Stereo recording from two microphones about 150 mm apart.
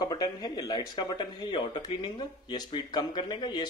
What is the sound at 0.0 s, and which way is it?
Speech, 25° left (ahead or behind).